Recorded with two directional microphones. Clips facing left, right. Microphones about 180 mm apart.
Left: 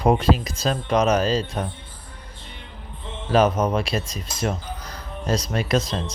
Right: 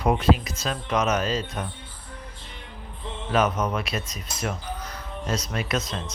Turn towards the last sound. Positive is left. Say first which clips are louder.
# left 5 dB
turn(degrees=35)  # may be behind; listen again after turning